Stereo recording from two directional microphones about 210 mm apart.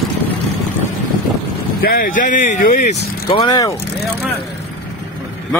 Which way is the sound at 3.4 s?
15° left (ahead or behind).